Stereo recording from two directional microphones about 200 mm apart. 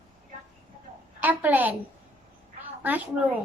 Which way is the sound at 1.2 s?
10° right (ahead or behind).